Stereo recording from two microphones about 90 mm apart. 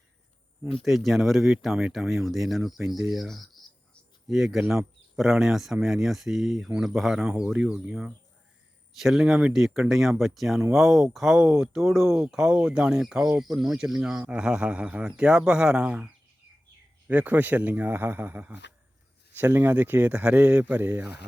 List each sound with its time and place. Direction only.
0.7 s speech: centre (ahead or behind); by 21.1 s 20° right (ahead or behind)